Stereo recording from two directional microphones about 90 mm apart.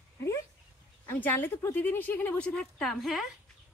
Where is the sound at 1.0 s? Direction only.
20° left (ahead or behind).